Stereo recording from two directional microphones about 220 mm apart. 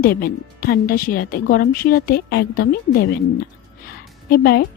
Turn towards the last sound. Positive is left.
turn(degrees=45)  # may be behind; listen again after turning